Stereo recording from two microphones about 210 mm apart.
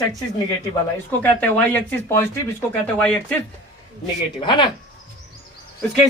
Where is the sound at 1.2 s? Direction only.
5° left (ahead or behind).